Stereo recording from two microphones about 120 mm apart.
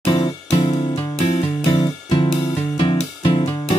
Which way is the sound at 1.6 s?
35° left (ahead or behind).